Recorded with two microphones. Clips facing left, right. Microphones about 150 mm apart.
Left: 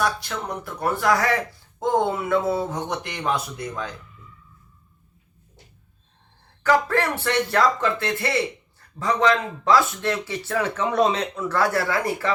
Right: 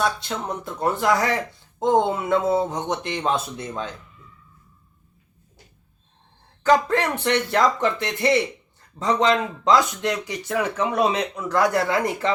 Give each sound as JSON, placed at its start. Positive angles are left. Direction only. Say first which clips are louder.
{"t": 0.0, "sound": "speech", "louder": "right 1 dB", "side_deg": -25}
{"t": 6.6, "sound": "speech", "louder": "right 2 dB", "side_deg": -20}